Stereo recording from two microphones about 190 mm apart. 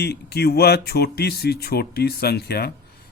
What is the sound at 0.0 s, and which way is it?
Speech, 60° left (ahead or behind).